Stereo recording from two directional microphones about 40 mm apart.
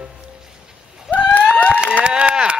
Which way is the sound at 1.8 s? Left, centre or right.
Right.